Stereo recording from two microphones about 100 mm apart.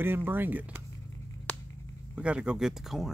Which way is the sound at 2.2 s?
10° right (ahead or behind).